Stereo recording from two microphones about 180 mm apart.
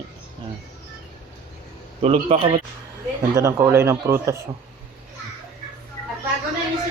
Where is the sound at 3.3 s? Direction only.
15° right (ahead or behind).